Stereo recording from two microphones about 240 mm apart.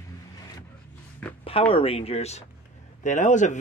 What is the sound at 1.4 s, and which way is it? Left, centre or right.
A man's voice, left.